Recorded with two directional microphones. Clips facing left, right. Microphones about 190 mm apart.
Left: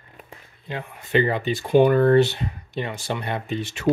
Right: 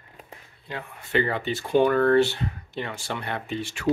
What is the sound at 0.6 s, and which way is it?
Speech, 20° left (ahead or behind).